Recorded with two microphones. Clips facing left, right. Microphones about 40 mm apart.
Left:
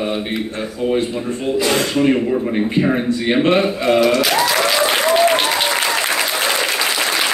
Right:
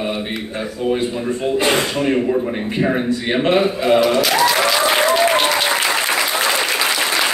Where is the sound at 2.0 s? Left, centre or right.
Centre.